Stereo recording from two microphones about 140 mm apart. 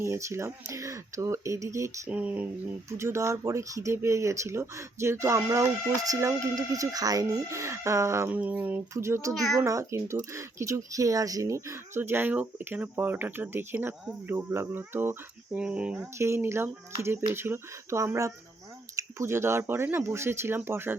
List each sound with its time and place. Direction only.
0.0 s speech: 20° right (ahead or behind)
2.0 s speech: 10° right (ahead or behind)
9.3 s a child's voice: centre (ahead or behind)
9.6 s speech: 20° right (ahead or behind)
16.1 s speech: 20° right (ahead or behind)